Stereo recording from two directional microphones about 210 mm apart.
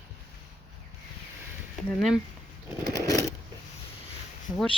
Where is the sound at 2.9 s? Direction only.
15° left (ahead or behind).